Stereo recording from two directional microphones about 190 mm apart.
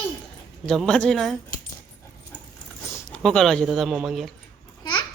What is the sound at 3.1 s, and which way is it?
Speech, 5° left (ahead or behind).